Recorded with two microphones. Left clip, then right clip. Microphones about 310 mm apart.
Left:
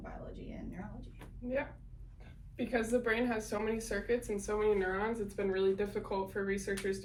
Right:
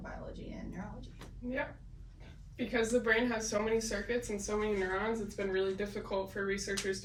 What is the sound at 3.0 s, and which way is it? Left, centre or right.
Speech, centre.